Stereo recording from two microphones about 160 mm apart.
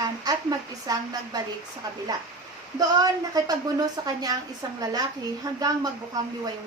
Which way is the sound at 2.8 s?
25° right (ahead or behind).